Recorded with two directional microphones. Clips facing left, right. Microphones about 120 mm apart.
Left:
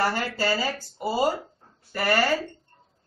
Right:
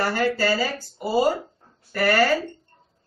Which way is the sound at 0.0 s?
20° left (ahead or behind).